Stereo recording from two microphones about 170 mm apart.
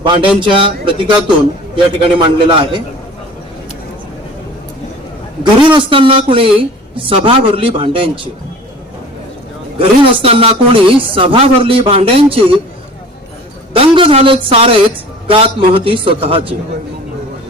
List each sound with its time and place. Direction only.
0.0 s a man's voice: 30° right (ahead or behind)
5.4 s speech: 30° right (ahead or behind)
9.7 s speech: 30° right (ahead or behind)
13.7 s a man's voice: 30° right (ahead or behind)